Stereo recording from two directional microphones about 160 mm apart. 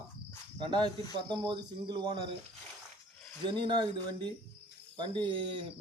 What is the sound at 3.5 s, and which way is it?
Speech, 30° right (ahead or behind).